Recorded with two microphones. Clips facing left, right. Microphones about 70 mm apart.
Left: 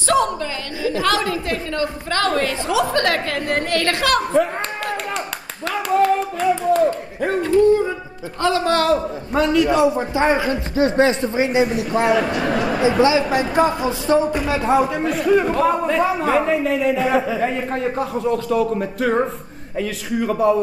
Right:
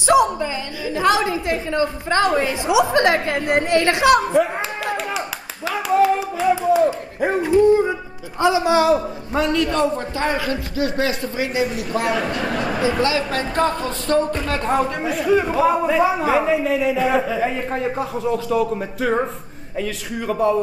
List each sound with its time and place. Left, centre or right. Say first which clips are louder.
0.0 s a woman's voice: right 3 dB; centre
5.7 s clapping: even; centre
8.4 s a man's voice: right 2 dB; centre; by 12.2 s left
12.2 s a man's voice: left 3 dB; centre